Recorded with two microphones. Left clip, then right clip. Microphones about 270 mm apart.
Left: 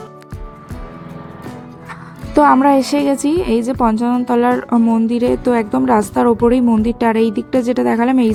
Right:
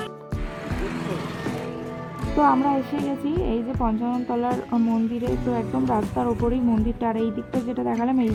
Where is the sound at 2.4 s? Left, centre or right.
Left.